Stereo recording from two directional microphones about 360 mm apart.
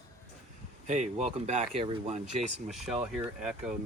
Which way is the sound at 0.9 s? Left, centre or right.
Centre.